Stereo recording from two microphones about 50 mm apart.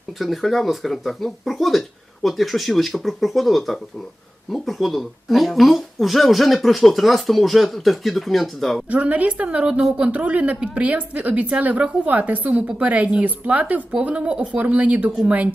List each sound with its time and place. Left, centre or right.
0.2 s speech: centre
8.9 s a woman's voice: right